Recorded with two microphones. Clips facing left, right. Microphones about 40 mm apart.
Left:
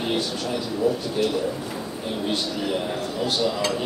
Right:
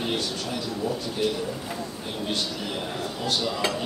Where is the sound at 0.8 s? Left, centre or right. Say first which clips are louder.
Left 7 dB; centre.